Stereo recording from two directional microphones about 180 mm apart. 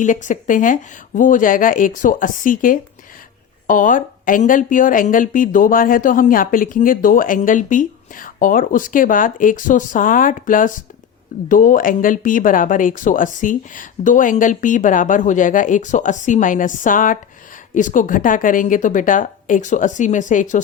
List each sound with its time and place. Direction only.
0.0 s a woman's voice: 45° left (ahead or behind)